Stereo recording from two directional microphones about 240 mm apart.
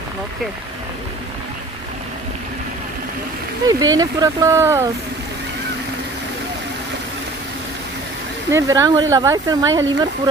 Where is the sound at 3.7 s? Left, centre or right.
Centre.